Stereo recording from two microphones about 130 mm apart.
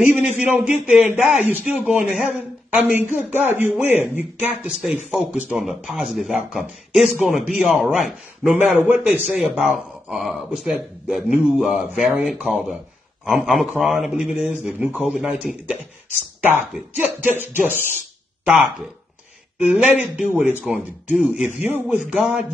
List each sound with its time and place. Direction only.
0.6 s a man's voice: 5° right (ahead or behind)
8.5 s a man's voice: 15° right (ahead or behind)
9.3 s a man's voice: centre (ahead or behind)
17.2 s a man's voice: 15° right (ahead or behind)